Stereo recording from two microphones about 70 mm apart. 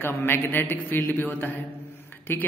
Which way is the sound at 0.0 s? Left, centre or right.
Left.